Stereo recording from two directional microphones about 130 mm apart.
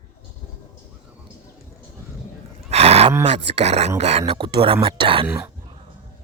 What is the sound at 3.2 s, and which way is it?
Speech, 50° right (ahead or behind).